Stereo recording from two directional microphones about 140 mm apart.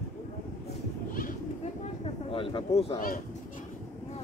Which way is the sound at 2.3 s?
40° left (ahead or behind).